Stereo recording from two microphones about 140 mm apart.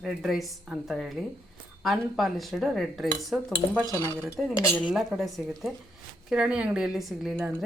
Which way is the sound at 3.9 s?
20° left (ahead or behind).